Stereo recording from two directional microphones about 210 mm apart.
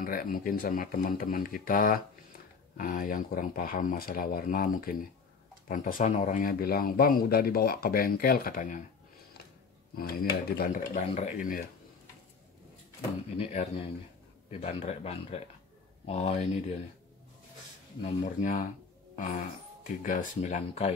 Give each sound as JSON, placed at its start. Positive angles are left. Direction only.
{"t": 0.0, "sound": "speech", "side_deg": 40}
{"t": 9.9, "sound": "speech", "side_deg": 45}
{"t": 13.4, "sound": "a man's voice", "side_deg": 35}
{"t": 18.0, "sound": "speech", "side_deg": 35}
{"t": 19.1, "sound": "a sound", "side_deg": 35}
{"t": 20.0, "sound": "speech", "side_deg": 40}